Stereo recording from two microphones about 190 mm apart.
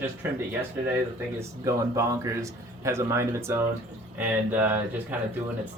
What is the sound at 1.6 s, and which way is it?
Speech, 15° right (ahead or behind).